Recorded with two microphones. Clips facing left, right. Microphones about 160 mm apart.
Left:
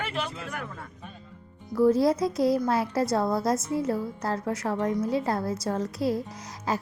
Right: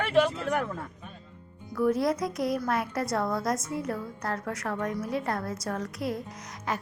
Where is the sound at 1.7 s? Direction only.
30° left (ahead or behind).